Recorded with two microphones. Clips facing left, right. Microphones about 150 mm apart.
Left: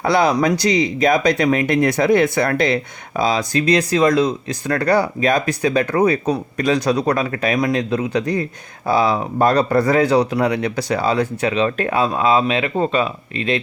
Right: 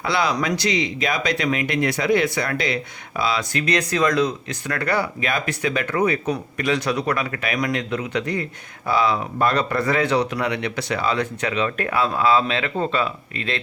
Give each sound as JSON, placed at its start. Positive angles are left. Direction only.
{"t": 0.0, "sound": "speech", "side_deg": 45}